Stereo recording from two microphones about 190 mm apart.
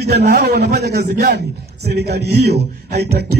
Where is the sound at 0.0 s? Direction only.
60° right (ahead or behind).